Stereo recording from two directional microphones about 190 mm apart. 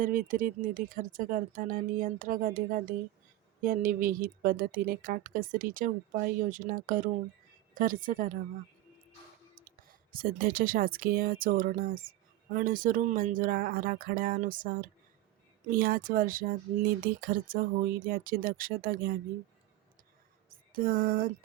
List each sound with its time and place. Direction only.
0.0 s speech: 45° right (ahead or behind)
9.6 s speech: 50° right (ahead or behind)
20.5 s a sound: 50° right (ahead or behind)